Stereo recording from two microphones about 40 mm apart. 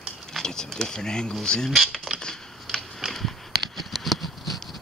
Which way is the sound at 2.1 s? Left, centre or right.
Right.